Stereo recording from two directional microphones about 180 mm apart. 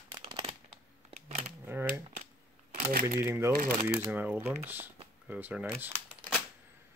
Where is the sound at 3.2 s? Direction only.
15° right (ahead or behind).